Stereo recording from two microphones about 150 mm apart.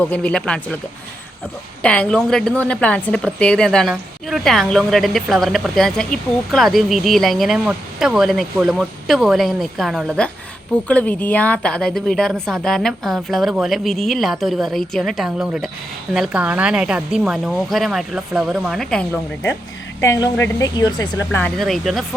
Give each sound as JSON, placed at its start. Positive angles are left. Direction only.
{"t": 0.0, "sound": "speech", "side_deg": 5}
{"t": 1.8, "sound": "a woman's voice", "side_deg": 5}
{"t": 21.6, "sound": "speech", "side_deg": 0}